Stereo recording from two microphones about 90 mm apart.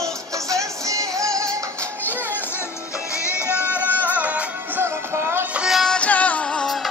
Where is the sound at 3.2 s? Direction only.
30° left (ahead or behind).